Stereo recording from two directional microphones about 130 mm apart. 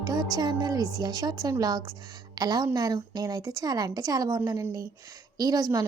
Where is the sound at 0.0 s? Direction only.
30° right (ahead or behind).